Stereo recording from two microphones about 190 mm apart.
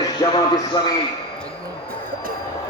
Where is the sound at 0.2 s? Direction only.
20° left (ahead or behind).